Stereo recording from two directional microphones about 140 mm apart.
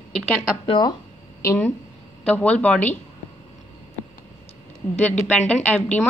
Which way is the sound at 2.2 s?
10° left (ahead or behind).